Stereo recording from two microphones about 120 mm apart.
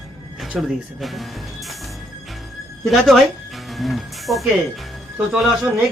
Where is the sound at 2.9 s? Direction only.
Centre (ahead or behind).